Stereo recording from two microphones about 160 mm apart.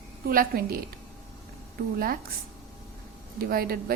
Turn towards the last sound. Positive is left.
turn(degrees=-70)  # may be behind; listen again after turning